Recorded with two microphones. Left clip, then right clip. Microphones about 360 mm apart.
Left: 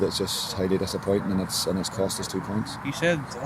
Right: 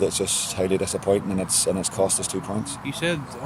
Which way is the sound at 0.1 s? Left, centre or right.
Centre.